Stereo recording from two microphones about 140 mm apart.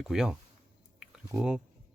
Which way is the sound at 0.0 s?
5° right (ahead or behind).